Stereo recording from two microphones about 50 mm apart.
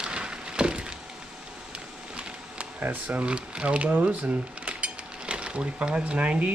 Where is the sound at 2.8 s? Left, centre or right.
Right.